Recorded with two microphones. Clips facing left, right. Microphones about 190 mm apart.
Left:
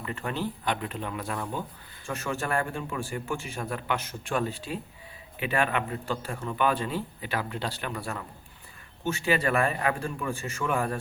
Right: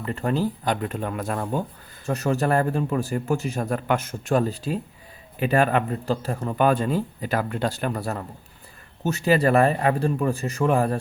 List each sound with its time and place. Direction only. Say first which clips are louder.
0.0 s a man's voice: right 7 dB; 40° right (ahead or behind)